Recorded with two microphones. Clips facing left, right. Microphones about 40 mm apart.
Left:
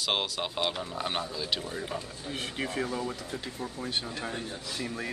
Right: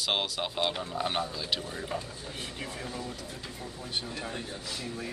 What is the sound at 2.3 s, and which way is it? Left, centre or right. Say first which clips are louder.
Speech: left 8 dB; left.